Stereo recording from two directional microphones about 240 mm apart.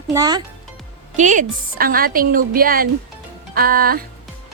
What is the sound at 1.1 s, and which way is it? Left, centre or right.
A woman's voice, right.